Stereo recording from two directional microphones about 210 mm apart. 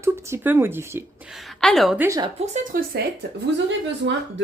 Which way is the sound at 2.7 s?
40° right (ahead or behind).